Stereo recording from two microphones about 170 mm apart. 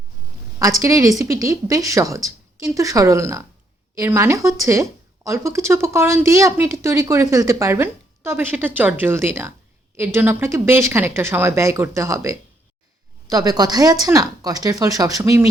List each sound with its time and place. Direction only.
0.6 s a woman's voice: 20° right (ahead or behind)